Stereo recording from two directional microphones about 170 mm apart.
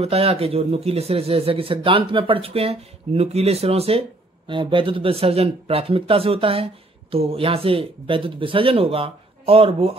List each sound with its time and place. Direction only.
0.0 s speech: 35° right (ahead or behind)